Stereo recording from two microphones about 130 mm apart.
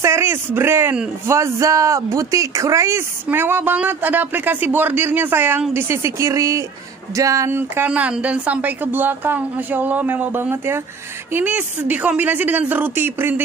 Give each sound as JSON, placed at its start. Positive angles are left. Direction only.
{"t": 0.0, "sound": "speech", "side_deg": -20}